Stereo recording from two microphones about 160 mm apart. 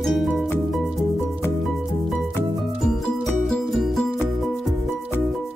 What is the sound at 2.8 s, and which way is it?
Music, centre (ahead or behind).